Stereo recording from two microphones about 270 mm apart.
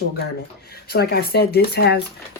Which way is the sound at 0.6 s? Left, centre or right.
Left.